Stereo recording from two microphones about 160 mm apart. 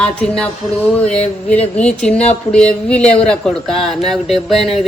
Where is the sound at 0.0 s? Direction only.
5° left (ahead or behind).